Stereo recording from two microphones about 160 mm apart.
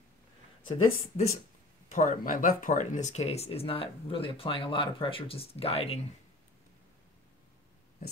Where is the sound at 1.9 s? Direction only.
55° left (ahead or behind).